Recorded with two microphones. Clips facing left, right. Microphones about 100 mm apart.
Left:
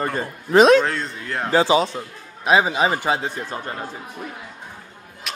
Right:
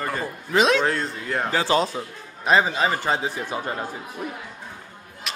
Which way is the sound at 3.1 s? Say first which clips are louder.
Left 1 dB; 5° right (ahead or behind).